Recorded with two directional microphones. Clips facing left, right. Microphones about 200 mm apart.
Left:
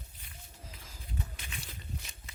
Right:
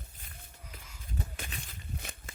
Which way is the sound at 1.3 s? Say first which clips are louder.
Right 4 dB; 50° right (ahead or behind).